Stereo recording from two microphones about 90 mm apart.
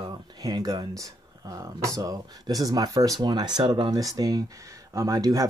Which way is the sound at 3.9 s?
40° right (ahead or behind).